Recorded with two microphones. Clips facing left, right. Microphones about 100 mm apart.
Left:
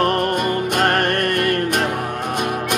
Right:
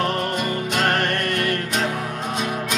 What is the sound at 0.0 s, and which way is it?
Music, 55° left (ahead or behind).